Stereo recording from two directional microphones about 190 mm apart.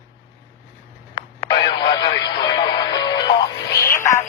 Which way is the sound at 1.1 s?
20° left (ahead or behind).